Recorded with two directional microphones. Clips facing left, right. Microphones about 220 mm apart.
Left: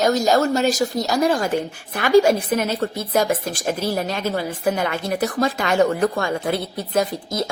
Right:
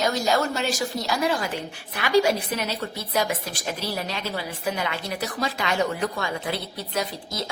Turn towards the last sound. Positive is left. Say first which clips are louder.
# left 8 dB
turn(degrees=50)  # may be behind; listen again after turning